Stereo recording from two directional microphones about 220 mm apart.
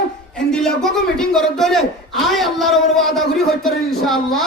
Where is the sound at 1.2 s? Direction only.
Centre (ahead or behind).